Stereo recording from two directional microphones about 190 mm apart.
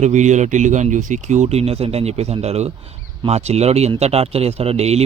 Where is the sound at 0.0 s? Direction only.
40° right (ahead or behind).